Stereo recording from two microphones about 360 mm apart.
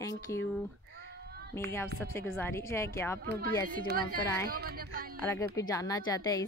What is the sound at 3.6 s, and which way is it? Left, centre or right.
A woman's voice, right.